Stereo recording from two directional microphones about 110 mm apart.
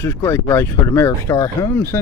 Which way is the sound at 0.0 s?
25° left (ahead or behind).